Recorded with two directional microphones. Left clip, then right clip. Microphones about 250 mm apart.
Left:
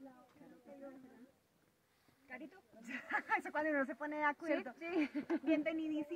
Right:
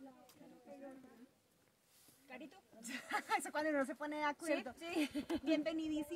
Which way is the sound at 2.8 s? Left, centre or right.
Centre.